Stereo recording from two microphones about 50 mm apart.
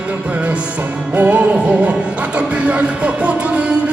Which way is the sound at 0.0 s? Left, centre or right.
Right.